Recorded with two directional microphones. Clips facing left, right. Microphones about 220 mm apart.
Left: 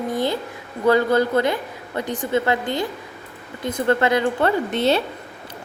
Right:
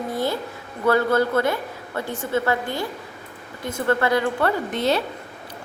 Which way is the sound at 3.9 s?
20° left (ahead or behind).